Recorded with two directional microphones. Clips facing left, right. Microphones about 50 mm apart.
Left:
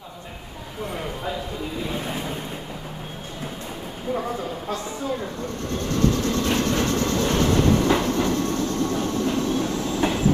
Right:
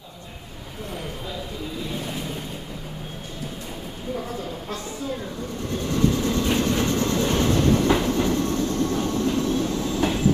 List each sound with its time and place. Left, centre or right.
2.0 s vehicle: left
5.7 s vehicle: centre
7.2 s train: centre